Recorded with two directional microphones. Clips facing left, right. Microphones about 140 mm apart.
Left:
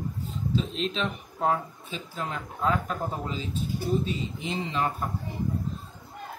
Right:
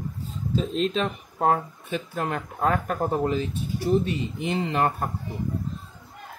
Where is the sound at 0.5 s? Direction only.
45° right (ahead or behind).